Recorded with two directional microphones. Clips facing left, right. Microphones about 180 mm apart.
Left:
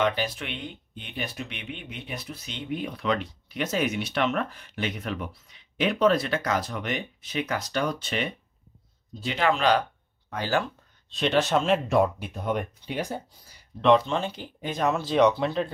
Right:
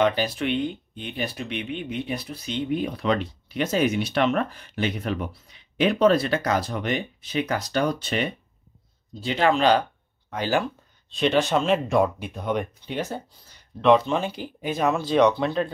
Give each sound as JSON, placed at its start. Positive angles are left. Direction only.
{"t": 0.0, "sound": "speech", "side_deg": -35}
{"t": 10.3, "sound": "speech", "side_deg": -15}
{"t": 11.1, "sound": "speech", "side_deg": 0}
{"t": 13.7, "sound": "speech", "side_deg": -5}